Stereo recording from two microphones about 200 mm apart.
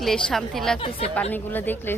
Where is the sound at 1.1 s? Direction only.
10° left (ahead or behind).